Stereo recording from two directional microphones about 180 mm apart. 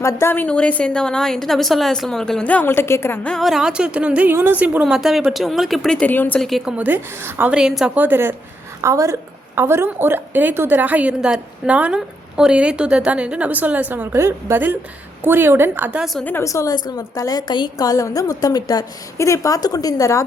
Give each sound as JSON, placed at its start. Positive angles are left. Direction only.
{"t": 0.0, "sound": "a woman's voice", "side_deg": 15}
{"t": 16.3, "sound": "a woman's voice", "side_deg": 15}